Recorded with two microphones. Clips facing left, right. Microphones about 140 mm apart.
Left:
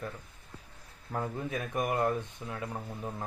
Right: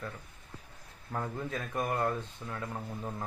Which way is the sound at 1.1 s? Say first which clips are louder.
Left 2 dB; 15° left (ahead or behind).